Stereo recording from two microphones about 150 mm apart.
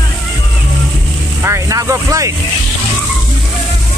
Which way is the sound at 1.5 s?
20° right (ahead or behind).